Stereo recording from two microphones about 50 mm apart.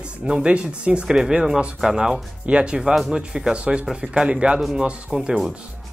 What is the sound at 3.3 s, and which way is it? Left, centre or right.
Speech, centre.